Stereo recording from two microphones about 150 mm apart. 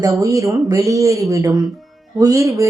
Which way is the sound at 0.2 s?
20° right (ahead or behind).